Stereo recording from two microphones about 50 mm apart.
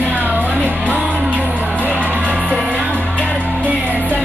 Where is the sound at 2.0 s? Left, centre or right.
Right.